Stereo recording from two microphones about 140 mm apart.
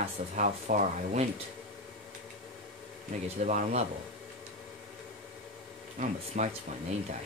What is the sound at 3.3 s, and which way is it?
Speech, 60° right (ahead or behind).